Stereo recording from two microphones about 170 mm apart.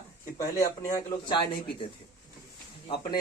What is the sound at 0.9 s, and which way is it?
Speech, 25° left (ahead or behind).